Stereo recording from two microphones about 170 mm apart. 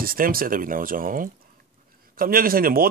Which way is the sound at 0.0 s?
60° right (ahead or behind).